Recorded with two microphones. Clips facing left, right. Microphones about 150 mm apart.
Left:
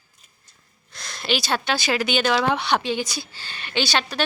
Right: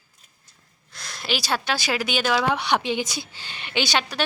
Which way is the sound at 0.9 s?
10° right (ahead or behind).